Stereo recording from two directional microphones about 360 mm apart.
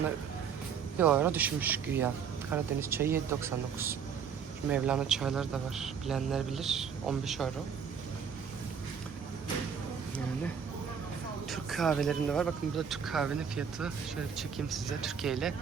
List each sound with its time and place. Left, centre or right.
0.9 s speech: centre
11.5 s speech: centre